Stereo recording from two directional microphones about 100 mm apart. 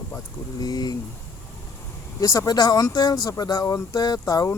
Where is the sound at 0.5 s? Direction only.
40° left (ahead or behind).